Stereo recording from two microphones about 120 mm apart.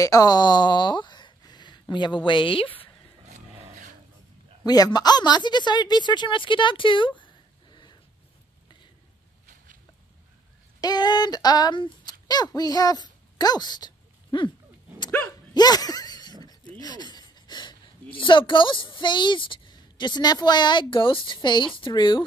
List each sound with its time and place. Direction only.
0.0 s speech: 30° left (ahead or behind); by 2.7 s 45° left (ahead or behind)
3.3 s a sound: 75° right (ahead or behind)
4.6 s speech: 30° left (ahead or behind)
10.8 s speech: 35° left (ahead or behind)
15.5 s a sound: 35° left (ahead or behind)
18.1 s speech: 45° left (ahead or behind)